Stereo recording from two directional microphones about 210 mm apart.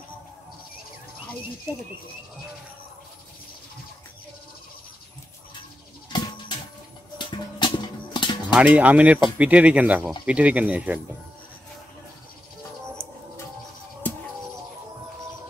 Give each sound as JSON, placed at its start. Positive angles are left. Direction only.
{"t": 6.1, "sound": "bird", "side_deg": 20}
{"t": 7.2, "sound": "music", "side_deg": 20}
{"t": 8.5, "sound": "speech", "side_deg": -5}